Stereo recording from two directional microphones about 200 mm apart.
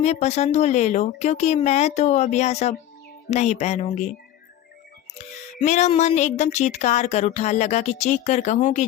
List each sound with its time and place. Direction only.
0.0 s speech: 35° left (ahead or behind)
5.1 s speech: 35° left (ahead or behind)